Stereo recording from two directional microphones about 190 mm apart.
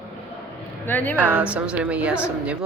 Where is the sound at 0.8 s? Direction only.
10° left (ahead or behind).